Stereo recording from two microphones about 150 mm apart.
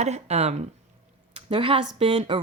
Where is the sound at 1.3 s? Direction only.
35° right (ahead or behind).